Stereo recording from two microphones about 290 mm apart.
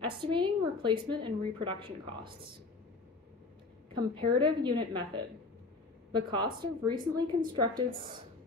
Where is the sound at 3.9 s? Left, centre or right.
Centre.